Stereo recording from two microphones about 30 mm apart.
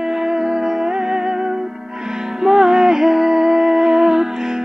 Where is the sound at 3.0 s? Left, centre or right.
Centre.